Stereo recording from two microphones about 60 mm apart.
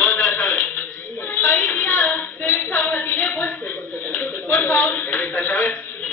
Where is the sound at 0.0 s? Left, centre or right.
Left.